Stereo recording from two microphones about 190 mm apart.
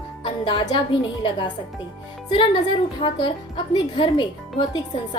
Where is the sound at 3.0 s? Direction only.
25° left (ahead or behind).